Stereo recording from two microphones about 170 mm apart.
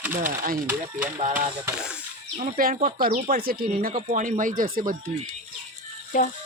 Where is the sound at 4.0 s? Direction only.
45° right (ahead or behind).